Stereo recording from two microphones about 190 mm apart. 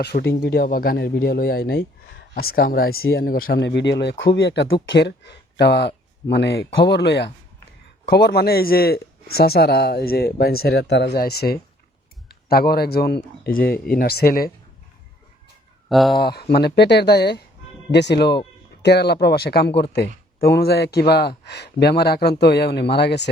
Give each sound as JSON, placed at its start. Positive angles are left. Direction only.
{"t": 0.0, "sound": "speech", "side_deg": 55}
{"t": 15.9, "sound": "speech", "side_deg": 0}
{"t": 16.1, "sound": "speech", "side_deg": 55}